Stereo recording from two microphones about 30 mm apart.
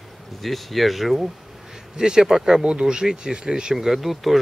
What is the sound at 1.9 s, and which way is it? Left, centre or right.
Speech, right.